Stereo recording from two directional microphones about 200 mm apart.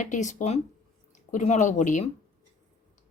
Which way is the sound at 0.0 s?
35° left (ahead or behind).